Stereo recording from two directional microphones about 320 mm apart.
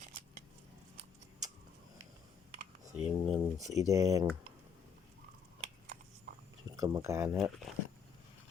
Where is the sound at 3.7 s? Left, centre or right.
Centre.